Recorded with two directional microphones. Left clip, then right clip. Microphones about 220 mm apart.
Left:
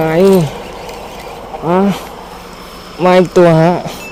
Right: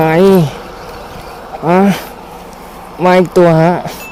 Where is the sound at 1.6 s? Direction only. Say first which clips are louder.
Right 3 dB; 10° right (ahead or behind).